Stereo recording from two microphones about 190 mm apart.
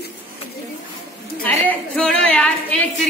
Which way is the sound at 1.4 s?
5° left (ahead or behind).